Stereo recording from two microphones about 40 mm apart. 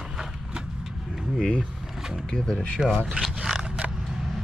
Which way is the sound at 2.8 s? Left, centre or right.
Centre.